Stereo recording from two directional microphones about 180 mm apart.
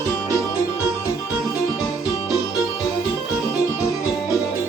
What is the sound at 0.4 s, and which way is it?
Music, 15° left (ahead or behind).